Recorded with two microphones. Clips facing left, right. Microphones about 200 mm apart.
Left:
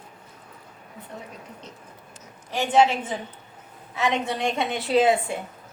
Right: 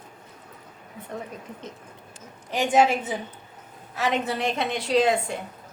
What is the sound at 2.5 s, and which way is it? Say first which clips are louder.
A woman's voice: even; 10° right (ahead or behind).